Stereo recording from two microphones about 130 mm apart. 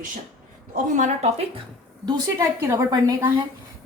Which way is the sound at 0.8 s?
70° right (ahead or behind).